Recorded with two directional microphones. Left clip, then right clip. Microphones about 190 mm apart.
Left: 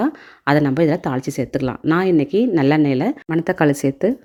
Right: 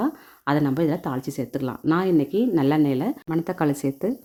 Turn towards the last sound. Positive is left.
turn(degrees=15)  # may be behind; listen again after turning